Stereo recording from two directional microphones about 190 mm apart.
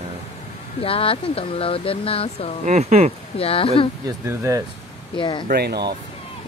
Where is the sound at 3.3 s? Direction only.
30° left (ahead or behind).